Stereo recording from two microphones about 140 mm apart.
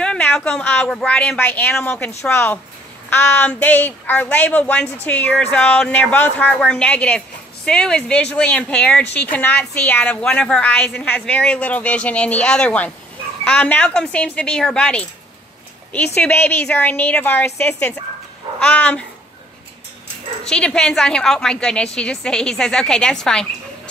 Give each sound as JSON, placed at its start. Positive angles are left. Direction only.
{"t": 0.0, "sound": "speech", "side_deg": 5}
{"t": 16.2, "sound": "speech", "side_deg": 15}
{"t": 20.4, "sound": "a woman's voice", "side_deg": 5}